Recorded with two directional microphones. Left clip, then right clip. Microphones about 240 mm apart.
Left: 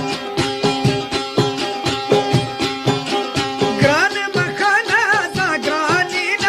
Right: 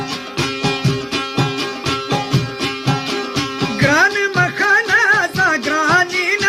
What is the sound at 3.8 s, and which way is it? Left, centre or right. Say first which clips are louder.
Music: right 3 dB; centre.